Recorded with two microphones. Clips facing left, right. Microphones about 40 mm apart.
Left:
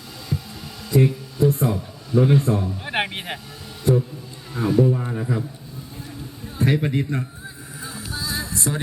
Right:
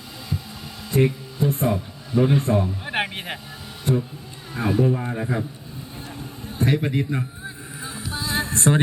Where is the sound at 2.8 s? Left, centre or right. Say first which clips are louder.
Left 1 dB; centre.